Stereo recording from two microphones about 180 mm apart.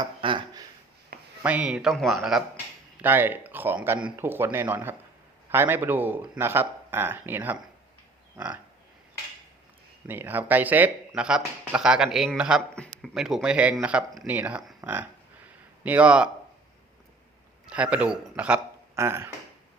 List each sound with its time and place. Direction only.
0.0 s a sound: 25° right (ahead or behind)
1.4 s speech: 10° right (ahead or behind)
3.0 s speech: 10° right (ahead or behind)
10.1 s speech: 10° right (ahead or behind)
14.8 s a sound: 10° right (ahead or behind)
15.8 s speech: 10° right (ahead or behind)
17.7 s speech: 5° right (ahead or behind)